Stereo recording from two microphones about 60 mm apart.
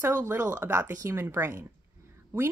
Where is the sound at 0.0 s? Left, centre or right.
Right.